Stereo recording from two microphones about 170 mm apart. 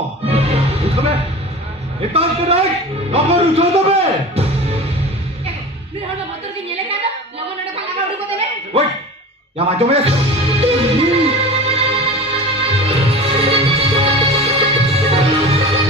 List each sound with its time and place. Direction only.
0.3 s music: 35° right (ahead or behind)
2.0 s speech: 35° right (ahead or behind)
9.6 s music: 35° right (ahead or behind)